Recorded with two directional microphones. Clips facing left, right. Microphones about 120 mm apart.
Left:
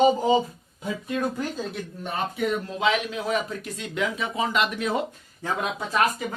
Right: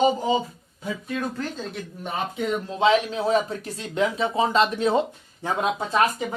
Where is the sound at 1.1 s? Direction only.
10° left (ahead or behind).